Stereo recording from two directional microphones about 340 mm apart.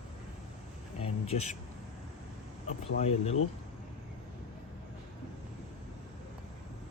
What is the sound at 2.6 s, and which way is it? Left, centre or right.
Speech, centre.